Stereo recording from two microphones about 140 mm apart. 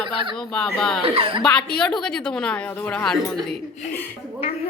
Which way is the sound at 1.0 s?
40° right (ahead or behind).